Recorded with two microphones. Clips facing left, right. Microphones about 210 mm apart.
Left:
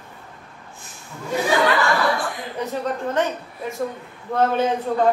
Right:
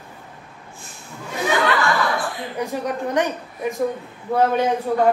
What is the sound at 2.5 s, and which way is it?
A woman's voice, 15° right (ahead or behind).